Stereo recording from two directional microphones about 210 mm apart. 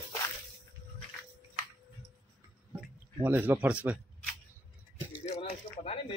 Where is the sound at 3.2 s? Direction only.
10° right (ahead or behind).